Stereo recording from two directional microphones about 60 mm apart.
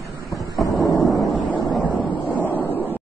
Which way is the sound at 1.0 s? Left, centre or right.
Centre.